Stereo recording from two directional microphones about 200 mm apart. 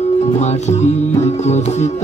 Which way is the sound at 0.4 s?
35° left (ahead or behind).